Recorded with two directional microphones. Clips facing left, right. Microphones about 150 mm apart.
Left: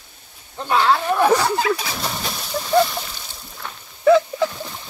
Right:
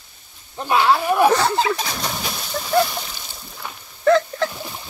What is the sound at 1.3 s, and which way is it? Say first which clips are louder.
Speech: even; 10° left (ahead or behind).